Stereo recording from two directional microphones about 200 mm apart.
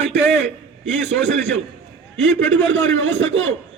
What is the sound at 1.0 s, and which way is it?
A man's voice, 65° right (ahead or behind).